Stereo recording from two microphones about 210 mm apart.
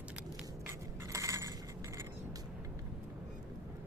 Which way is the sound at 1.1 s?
15° right (ahead or behind).